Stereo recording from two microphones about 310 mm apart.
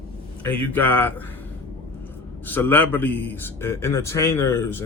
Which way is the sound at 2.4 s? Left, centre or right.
Centre.